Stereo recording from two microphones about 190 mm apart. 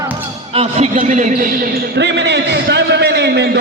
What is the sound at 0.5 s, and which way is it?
A man's voice, 35° right (ahead or behind).